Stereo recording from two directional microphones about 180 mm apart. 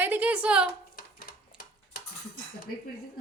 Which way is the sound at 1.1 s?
55° left (ahead or behind).